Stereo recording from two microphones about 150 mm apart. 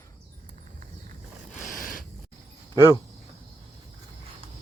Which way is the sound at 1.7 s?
65° left (ahead or behind).